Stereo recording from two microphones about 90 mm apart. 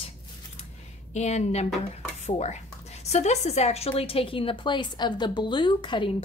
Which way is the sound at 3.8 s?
90° left.